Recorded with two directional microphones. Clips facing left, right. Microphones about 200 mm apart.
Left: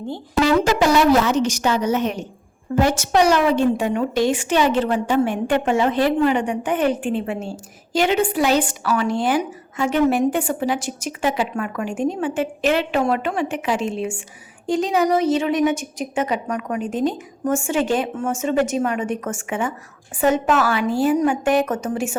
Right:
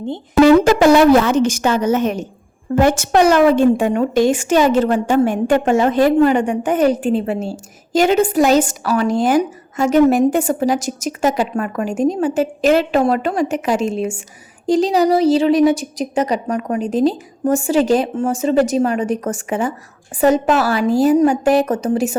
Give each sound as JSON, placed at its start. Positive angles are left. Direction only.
{"t": 0.4, "sound": "a woman's voice", "side_deg": -55}